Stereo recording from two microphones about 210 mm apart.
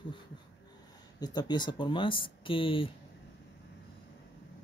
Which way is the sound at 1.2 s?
20° left (ahead or behind).